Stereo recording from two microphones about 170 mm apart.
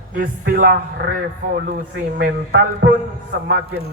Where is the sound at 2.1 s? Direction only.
90° right.